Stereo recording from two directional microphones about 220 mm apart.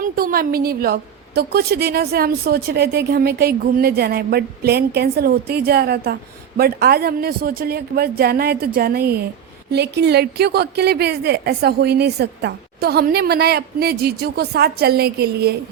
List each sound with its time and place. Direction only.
0.0 s a woman's voice: 40° right (ahead or behind)